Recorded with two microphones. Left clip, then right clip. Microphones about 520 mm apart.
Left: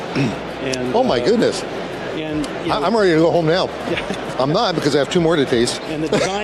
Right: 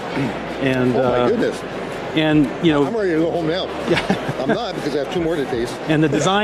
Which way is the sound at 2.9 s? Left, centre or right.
Left.